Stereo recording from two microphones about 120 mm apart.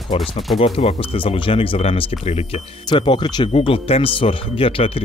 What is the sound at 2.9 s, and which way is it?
Speech, 40° left (ahead or behind).